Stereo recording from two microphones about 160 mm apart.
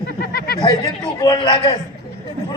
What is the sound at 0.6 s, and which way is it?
A man's voice, 25° left (ahead or behind).